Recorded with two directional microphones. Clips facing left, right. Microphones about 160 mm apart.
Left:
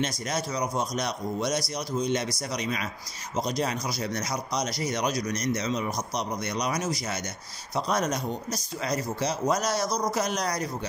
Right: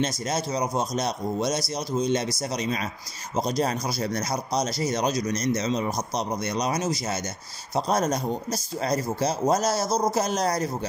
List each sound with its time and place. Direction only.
0.2 s speech: 25° right (ahead or behind)